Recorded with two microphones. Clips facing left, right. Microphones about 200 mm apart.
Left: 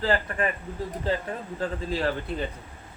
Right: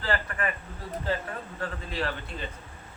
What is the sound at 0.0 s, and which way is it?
Speech, 30° left (ahead or behind).